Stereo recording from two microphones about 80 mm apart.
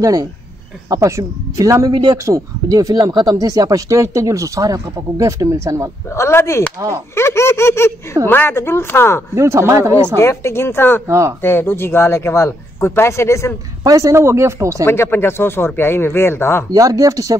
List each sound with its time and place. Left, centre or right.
0.0 s speech: right
6.0 s speech: left
9.3 s speech: right
10.1 s speech: left
11.1 s speech: right
11.4 s speech: left
13.8 s speech: right
14.9 s speech: left
16.7 s speech: right